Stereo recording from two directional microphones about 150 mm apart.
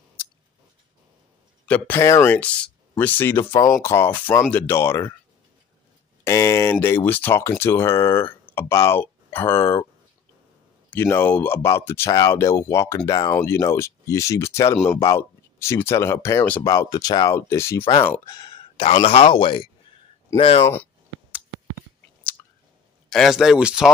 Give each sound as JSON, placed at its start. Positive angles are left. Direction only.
{"t": 1.7, "sound": "speech", "side_deg": 15}
{"t": 6.2, "sound": "speech", "side_deg": 20}
{"t": 10.9, "sound": "speech", "side_deg": 15}
{"t": 18.2, "sound": "speech", "side_deg": 25}
{"t": 18.8, "sound": "speech", "side_deg": 40}
{"t": 20.6, "sound": "speech", "side_deg": 15}
{"t": 23.0, "sound": "speech", "side_deg": 0}